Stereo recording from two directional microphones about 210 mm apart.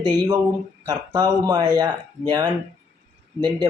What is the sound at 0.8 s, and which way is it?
Speech, 15° right (ahead or behind).